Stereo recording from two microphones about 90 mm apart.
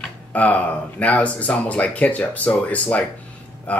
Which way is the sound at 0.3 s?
15° left (ahead or behind).